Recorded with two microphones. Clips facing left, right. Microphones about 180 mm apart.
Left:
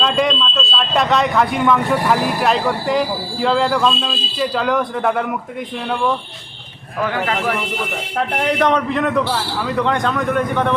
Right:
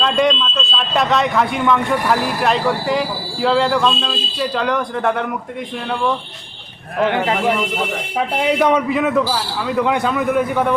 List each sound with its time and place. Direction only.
0.0 s speech: centre (ahead or behind)
7.0 s a man's voice: 20° right (ahead or behind)
8.4 s speech: 10° right (ahead or behind)